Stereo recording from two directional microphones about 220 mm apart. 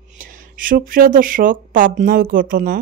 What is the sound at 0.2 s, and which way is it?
Speech, 40° right (ahead or behind).